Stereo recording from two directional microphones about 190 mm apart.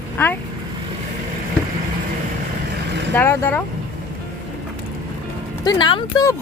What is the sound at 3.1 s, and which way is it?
Speech, 10° left (ahead or behind).